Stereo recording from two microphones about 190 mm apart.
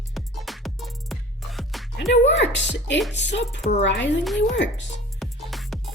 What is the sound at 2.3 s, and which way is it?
Speech, 70° left (ahead or behind).